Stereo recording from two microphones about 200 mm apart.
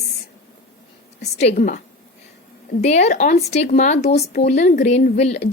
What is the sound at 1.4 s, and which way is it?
Speech, 35° left (ahead or behind).